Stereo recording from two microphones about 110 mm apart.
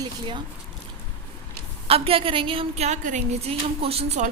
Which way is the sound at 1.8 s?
60° right (ahead or behind).